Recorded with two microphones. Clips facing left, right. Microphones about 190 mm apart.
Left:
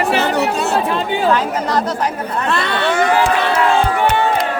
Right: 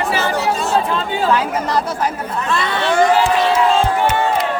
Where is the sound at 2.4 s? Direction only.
65° left (ahead or behind).